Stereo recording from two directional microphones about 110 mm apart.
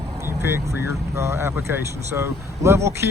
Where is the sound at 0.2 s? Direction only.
20° right (ahead or behind).